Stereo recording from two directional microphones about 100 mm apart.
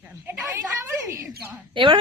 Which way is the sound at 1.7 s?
55° right (ahead or behind).